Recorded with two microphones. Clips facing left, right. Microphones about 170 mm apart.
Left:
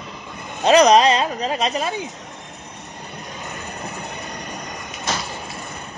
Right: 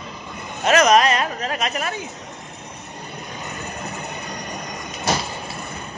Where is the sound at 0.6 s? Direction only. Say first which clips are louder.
Left 3 dB; 35° left (ahead or behind).